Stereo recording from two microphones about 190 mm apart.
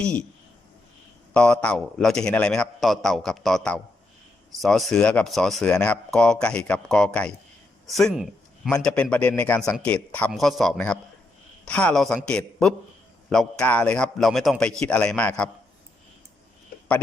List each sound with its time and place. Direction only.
0.0 s a man's voice: 5° left (ahead or behind)
1.3 s a man's voice: 5° left (ahead or behind)